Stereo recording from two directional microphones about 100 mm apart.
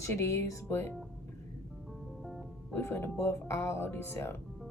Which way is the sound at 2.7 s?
25° left (ahead or behind).